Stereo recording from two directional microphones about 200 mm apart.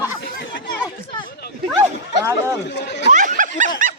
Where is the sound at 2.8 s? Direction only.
60° left (ahead or behind).